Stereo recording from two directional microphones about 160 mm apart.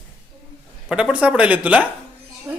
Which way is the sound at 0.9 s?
5° right (ahead or behind).